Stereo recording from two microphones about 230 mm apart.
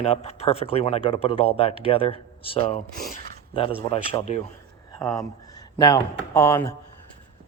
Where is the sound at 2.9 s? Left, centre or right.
Left.